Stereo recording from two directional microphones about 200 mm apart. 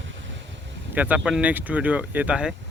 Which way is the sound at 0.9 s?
10° right (ahead or behind).